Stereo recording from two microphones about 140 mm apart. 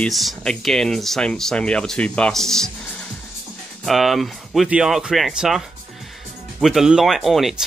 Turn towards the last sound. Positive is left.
turn(degrees=0)  # may be behind; listen again after turning